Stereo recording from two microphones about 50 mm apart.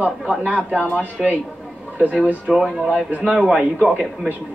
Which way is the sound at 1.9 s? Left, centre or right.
Right.